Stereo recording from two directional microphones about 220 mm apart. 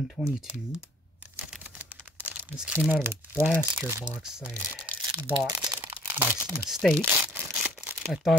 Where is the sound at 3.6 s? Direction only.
15° right (ahead or behind).